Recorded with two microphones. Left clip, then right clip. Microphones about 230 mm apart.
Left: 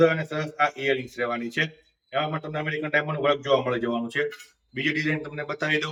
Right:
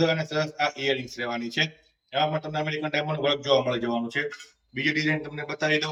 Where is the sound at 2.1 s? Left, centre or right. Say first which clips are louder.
Right 2 dB; centre.